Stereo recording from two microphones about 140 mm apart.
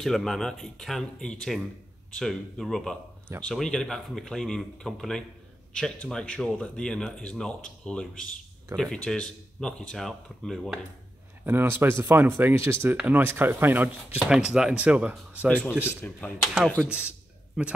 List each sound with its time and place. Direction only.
0.0 s speech: centre (ahead or behind)
11.4 s speech: 15° right (ahead or behind)
15.4 s speech: 10° left (ahead or behind)